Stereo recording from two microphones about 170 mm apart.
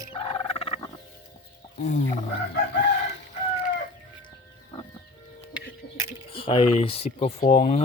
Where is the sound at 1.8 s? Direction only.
45° left (ahead or behind).